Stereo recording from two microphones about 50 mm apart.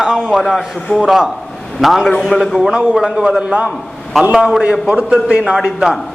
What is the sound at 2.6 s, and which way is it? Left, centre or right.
A man's voice, centre.